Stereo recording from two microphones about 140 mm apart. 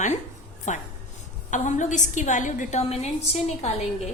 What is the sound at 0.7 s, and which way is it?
A woman's voice, 60° left (ahead or behind).